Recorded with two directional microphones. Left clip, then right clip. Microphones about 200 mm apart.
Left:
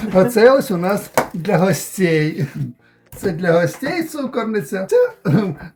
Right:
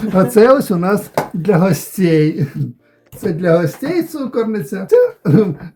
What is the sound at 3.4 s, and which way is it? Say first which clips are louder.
Speech: right 2 dB; 15° right (ahead or behind).